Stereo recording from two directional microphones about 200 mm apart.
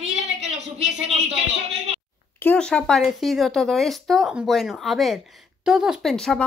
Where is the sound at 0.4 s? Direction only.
35° right (ahead or behind).